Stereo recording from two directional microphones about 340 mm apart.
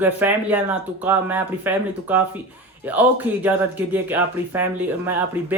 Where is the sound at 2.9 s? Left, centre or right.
Centre.